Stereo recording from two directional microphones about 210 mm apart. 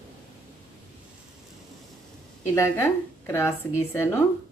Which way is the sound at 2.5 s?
10° left (ahead or behind).